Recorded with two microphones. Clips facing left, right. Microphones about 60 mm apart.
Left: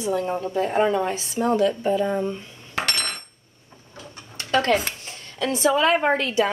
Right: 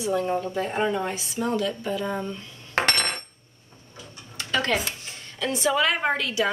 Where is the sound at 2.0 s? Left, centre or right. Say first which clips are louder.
Left 5 dB; centre.